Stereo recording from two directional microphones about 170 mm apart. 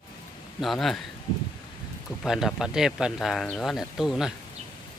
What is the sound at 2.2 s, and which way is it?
Speech, 5° right (ahead or behind).